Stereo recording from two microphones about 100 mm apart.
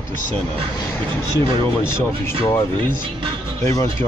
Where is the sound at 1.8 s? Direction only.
25° left (ahead or behind).